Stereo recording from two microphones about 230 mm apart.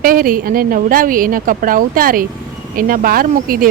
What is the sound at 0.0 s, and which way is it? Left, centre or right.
Speech, right.